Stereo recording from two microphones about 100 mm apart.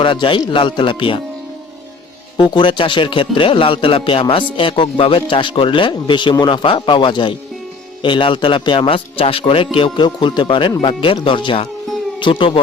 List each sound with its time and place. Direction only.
0.0 s speech: 55° left (ahead or behind)
2.4 s speech: 50° left (ahead or behind)